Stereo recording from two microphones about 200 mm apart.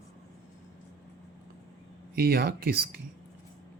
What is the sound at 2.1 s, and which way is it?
Speech, 50° right (ahead or behind).